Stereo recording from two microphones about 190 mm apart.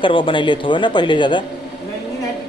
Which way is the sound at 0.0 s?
25° left (ahead or behind).